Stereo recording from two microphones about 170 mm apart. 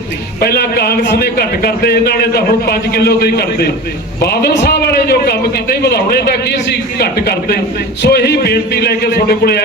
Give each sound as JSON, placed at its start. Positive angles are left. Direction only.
{"t": 0.3, "sound": "a man's voice", "side_deg": 65}